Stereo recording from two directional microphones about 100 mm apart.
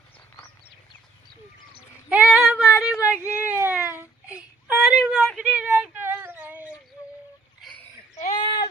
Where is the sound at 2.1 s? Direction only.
10° right (ahead or behind).